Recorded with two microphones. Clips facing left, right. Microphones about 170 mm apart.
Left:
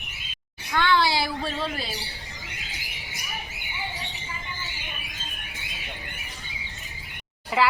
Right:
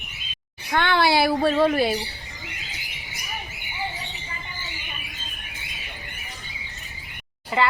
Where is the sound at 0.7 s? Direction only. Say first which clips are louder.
Right 3 dB; 55° right (ahead or behind).